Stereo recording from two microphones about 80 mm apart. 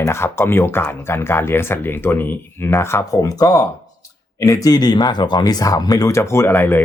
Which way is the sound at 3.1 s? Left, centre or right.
Left.